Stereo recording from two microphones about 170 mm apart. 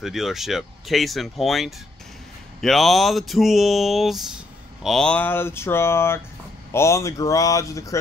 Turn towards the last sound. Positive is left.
turn(degrees=20)  # may be behind; listen again after turning